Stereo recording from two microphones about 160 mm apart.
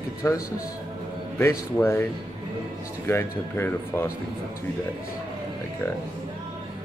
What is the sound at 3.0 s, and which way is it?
Speech, 15° left (ahead or behind).